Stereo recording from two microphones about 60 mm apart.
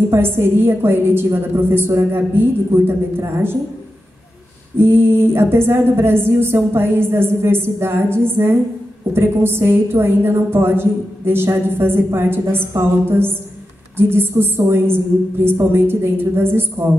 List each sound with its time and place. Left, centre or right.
0.1 s a woman's voice: right
4.7 s a woman's voice: right